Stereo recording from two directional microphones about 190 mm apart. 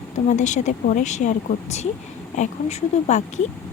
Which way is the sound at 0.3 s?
40° left (ahead or behind).